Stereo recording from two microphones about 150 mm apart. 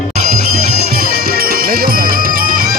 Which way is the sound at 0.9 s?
85° right.